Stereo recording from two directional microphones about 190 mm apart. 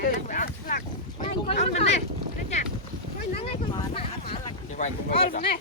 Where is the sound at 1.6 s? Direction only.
35° left (ahead or behind).